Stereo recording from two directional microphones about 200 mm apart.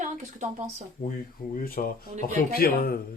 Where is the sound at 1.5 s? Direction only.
45° left (ahead or behind).